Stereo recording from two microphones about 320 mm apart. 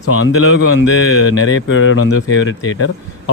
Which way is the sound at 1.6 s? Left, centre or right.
Left.